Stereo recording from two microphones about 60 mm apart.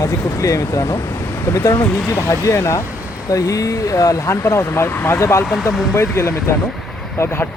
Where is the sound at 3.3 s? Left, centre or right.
Left.